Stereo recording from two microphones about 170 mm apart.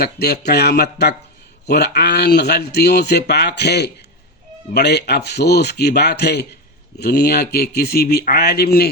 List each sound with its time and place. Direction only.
0.0 s speech: 70° left (ahead or behind)